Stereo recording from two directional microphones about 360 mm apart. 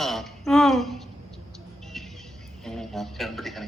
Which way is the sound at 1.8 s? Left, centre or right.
Centre.